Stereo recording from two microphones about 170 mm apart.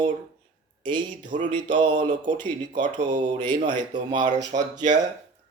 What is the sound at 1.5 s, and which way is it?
Speech, 30° right (ahead or behind).